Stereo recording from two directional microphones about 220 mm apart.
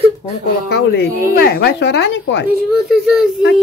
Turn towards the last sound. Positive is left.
turn(degrees=0)  # may be behind; listen again after turning